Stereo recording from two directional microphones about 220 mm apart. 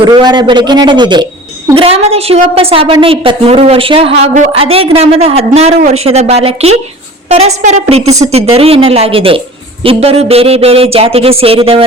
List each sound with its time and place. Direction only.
0.0 s a woman's voice: 20° right (ahead or behind)